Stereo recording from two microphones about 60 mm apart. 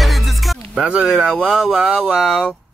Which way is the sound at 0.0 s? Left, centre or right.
Centre.